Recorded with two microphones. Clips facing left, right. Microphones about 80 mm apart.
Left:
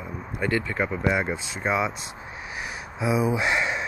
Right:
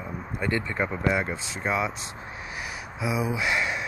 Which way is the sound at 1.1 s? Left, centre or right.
Centre.